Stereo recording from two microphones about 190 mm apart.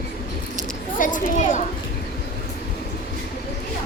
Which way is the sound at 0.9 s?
45° left (ahead or behind).